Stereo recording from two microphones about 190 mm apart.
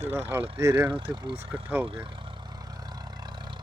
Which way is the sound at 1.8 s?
25° right (ahead or behind).